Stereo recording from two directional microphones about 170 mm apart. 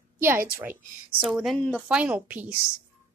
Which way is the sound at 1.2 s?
5° right (ahead or behind).